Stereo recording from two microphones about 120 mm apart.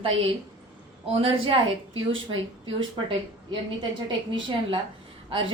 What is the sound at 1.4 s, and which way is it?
Speech, 50° right (ahead or behind).